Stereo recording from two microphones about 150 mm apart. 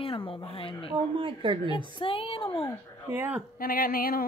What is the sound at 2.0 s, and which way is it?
Speech, 35° left (ahead or behind).